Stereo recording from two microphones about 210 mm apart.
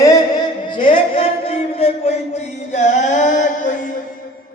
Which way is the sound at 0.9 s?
25° left (ahead or behind).